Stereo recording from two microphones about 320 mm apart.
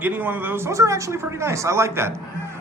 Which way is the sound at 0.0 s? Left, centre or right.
Centre.